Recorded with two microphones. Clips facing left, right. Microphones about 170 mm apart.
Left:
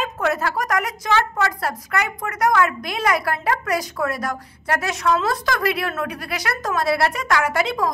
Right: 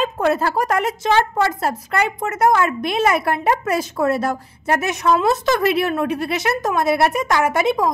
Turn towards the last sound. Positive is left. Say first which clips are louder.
# right 4 dB
turn(degrees=-20)  # may be behind; listen again after turning